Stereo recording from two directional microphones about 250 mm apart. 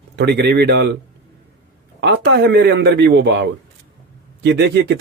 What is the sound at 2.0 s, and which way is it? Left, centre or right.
A man's voice, right.